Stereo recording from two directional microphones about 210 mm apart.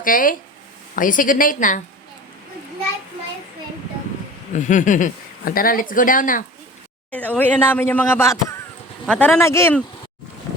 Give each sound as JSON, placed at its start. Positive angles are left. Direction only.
{"t": 0.0, "sound": "speech", "side_deg": 40}
{"t": 4.5, "sound": "speech", "side_deg": 35}
{"t": 7.1, "sound": "speech", "side_deg": 5}